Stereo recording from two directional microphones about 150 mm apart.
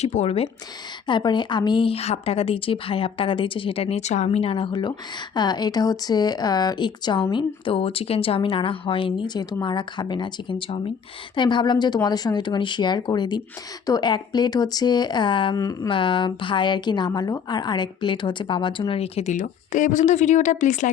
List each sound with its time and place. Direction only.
0.0 s speech: 45° left (ahead or behind)
1.0 s a woman's voice: 30° left (ahead or behind)
15.5 s speech: 25° left (ahead or behind)
15.9 s a woman's voice: 35° left (ahead or behind); by 20.9 s 55° left (ahead or behind)